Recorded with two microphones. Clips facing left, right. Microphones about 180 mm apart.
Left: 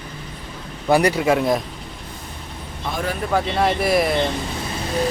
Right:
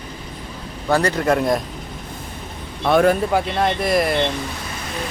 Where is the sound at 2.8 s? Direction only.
65° right (ahead or behind).